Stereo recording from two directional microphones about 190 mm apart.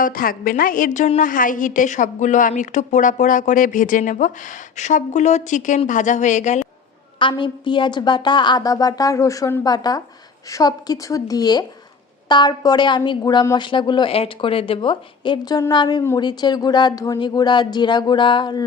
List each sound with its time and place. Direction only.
0.0 s a woman's voice: 50° left (ahead or behind)
7.2 s a woman's voice: 25° left (ahead or behind)